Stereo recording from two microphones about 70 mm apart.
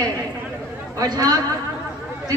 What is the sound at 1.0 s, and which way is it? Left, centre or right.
Speech, right.